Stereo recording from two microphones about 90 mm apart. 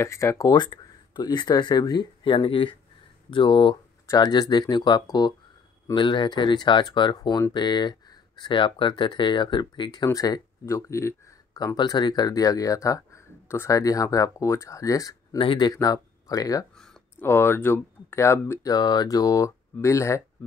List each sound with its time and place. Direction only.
0.0 s speech: 35° left (ahead or behind)
0.6 s speech: 55° left (ahead or behind)
2.2 s speech: 75° left (ahead or behind)
4.1 s speech: 50° left (ahead or behind)
10.6 s speech: 30° left (ahead or behind)
11.5 s speech: 50° left (ahead or behind)
15.3 s speech: 70° left (ahead or behind)
15.6 s speech: 45° left (ahead or behind)
16.7 s a sound: 5° left (ahead or behind)
17.2 s speech: 25° left (ahead or behind)
18.6 s speech: 50° left (ahead or behind); by 20.2 s 35° left (ahead or behind)